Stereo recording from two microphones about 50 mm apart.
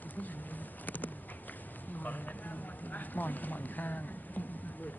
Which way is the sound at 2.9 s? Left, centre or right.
Left.